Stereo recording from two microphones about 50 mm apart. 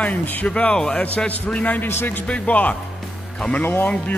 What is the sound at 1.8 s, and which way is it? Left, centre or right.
Speech, left.